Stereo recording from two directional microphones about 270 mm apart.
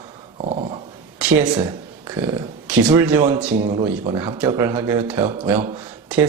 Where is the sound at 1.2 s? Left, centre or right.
Centre.